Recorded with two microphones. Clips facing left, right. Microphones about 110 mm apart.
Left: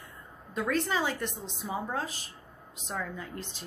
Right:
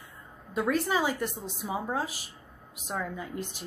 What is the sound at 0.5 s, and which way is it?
A woman's voice, 10° right (ahead or behind).